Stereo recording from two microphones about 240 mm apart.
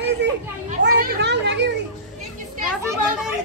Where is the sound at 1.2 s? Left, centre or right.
Right.